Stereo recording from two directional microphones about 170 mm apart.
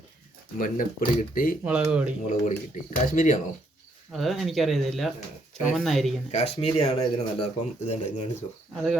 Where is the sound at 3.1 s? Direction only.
50° left (ahead or behind).